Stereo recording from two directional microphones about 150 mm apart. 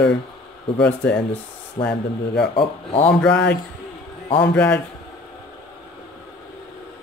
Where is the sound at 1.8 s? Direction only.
45° left (ahead or behind).